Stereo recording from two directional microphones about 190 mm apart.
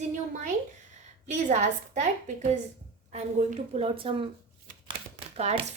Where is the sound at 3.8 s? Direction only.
30° right (ahead or behind).